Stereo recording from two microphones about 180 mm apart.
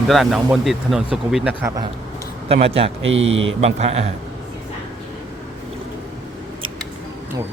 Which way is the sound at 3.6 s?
35° right (ahead or behind).